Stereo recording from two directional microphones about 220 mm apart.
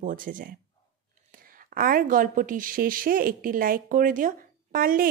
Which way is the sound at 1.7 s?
40° right (ahead or behind).